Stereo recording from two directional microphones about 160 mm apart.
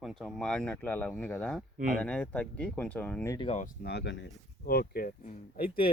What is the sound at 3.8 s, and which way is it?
Speech, 90° left.